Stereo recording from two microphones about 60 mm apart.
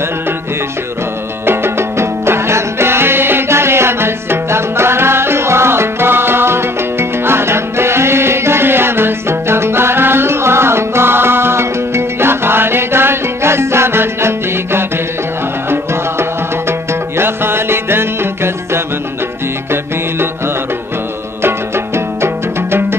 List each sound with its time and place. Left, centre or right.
1.4 s music: right
21.4 s music: right